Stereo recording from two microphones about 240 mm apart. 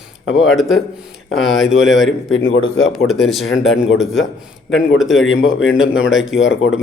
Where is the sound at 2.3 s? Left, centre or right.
Left.